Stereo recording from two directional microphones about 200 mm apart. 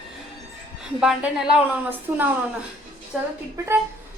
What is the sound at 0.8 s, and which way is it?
A woman's voice, 5° right (ahead or behind).